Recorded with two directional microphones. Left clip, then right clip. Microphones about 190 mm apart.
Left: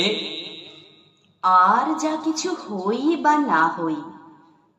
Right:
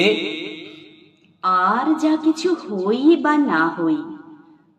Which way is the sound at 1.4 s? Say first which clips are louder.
Left 1 dB; 20° right (ahead or behind).